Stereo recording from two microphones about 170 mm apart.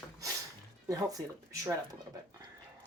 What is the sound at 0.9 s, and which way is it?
Speech, 20° right (ahead or behind).